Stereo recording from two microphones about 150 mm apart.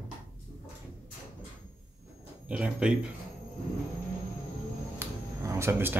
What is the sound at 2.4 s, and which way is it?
Speech, 5° right (ahead or behind).